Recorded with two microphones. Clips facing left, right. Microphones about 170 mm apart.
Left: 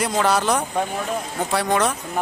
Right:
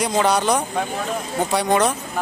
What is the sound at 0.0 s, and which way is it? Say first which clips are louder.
A man's voice: right 1 dB; centre (ahead or behind).